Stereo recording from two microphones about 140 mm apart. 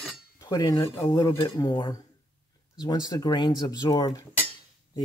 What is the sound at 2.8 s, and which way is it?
Speech, 30° left (ahead or behind).